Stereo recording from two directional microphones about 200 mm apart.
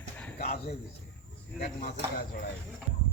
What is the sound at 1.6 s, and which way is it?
Speech, 45° left (ahead or behind).